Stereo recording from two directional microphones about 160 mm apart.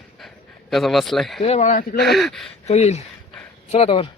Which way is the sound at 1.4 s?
45° left (ahead or behind).